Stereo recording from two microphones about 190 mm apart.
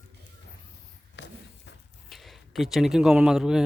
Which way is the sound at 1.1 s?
65° left (ahead or behind).